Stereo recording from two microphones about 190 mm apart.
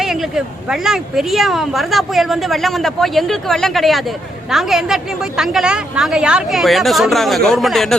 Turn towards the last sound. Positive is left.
turn(degrees=0)  # may be behind; listen again after turning